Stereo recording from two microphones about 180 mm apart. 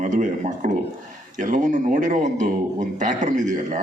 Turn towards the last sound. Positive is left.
turn(degrees=-45)  # may be behind; listen again after turning